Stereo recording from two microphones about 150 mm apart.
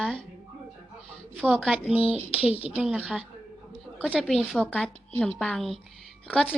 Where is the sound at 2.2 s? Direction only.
40° left (ahead or behind).